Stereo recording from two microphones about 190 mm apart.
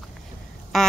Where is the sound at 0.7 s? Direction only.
Centre (ahead or behind).